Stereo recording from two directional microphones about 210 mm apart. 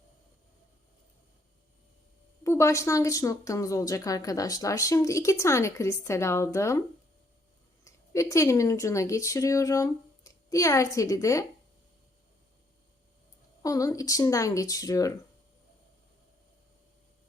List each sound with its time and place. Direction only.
2.4 s speech: 15° left (ahead or behind)
7.9 s speech: 15° left (ahead or behind)
13.6 s speech: 15° left (ahead or behind)